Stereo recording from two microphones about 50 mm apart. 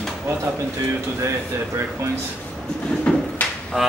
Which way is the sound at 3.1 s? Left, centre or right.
Centre.